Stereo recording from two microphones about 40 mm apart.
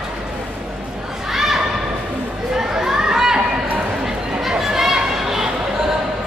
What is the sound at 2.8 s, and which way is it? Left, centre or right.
Chatter, centre.